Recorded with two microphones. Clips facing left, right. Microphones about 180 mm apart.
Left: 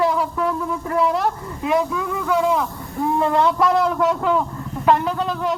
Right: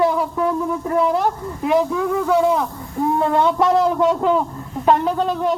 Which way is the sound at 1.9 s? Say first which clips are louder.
Right 4 dB; 35° right (ahead or behind).